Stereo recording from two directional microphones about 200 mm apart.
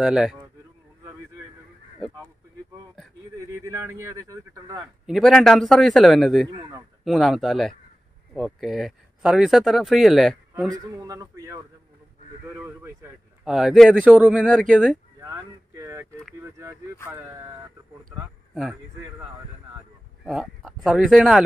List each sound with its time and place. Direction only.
0.0 s speech: 5° right (ahead or behind)
2.0 s speech: centre (ahead or behind)
3.3 s speech: 15° right (ahead or behind)
5.0 s speech: centre (ahead or behind)
6.5 s speech: 15° right (ahead or behind)
7.1 s speech: centre (ahead or behind)
10.7 s speech: 15° right (ahead or behind)
14.4 s speech: 5° left (ahead or behind)
15.2 s a sound: 15° right (ahead or behind)
16.3 s speech: 15° right (ahead or behind)
18.5 s speech: centre (ahead or behind)
20.2 s speech: centre (ahead or behind)